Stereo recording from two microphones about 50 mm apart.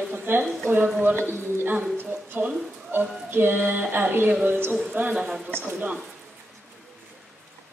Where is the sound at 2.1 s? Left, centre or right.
Right.